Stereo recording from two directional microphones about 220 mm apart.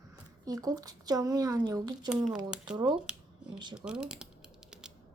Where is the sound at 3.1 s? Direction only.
5° right (ahead or behind).